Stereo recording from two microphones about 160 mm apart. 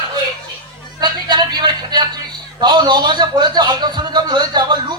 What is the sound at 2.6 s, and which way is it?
A man's voice, 30° right (ahead or behind).